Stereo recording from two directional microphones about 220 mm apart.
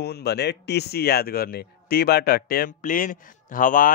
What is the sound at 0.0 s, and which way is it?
Speech, 50° left (ahead or behind).